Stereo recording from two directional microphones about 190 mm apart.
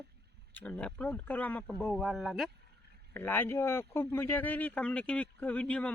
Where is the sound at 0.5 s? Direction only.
10° left (ahead or behind).